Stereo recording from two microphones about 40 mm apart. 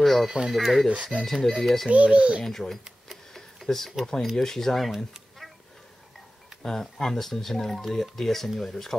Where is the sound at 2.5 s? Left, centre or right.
Centre.